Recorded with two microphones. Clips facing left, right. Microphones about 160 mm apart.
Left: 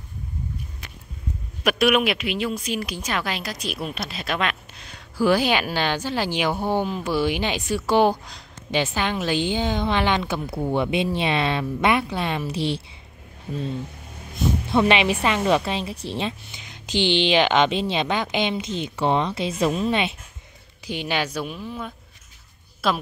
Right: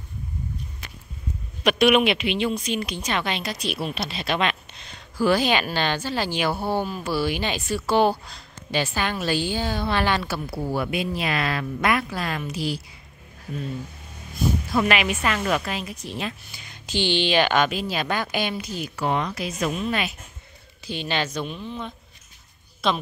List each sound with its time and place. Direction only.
1.6 s a woman's voice: 5° left (ahead or behind)
5.1 s a woman's voice: 10° left (ahead or behind); by 12.8 s 30° left (ahead or behind)
14.7 s a woman's voice: 30° left (ahead or behind)
16.6 s a woman's voice: 15° left (ahead or behind)
20.8 s a woman's voice: 15° left (ahead or behind)